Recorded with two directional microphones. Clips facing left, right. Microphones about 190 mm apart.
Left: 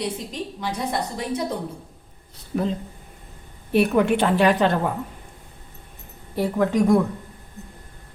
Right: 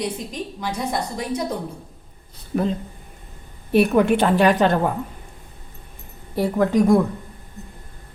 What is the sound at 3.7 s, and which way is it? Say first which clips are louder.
A woman's voice: right 2 dB; 45° right (ahead or behind).